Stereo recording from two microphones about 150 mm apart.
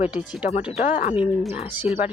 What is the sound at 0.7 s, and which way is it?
Speech, 50° left (ahead or behind).